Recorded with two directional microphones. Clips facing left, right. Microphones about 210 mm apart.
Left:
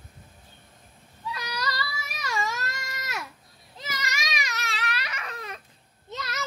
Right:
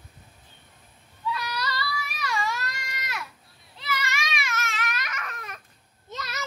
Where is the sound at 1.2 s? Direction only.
40° left (ahead or behind).